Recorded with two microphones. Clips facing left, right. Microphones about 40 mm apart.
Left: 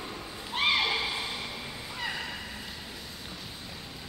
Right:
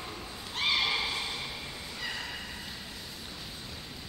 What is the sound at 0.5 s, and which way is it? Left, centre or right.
Neigh, centre.